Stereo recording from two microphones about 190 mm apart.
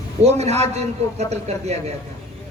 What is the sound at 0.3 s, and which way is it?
A man's voice, 35° right (ahead or behind).